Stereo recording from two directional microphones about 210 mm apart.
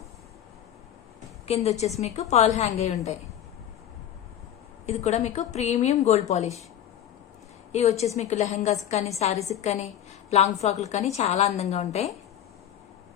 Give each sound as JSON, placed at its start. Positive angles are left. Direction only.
{"t": 1.5, "sound": "a woman's voice", "side_deg": 30}
{"t": 4.9, "sound": "a woman's voice", "side_deg": 30}
{"t": 7.7, "sound": "a woman's voice", "side_deg": 30}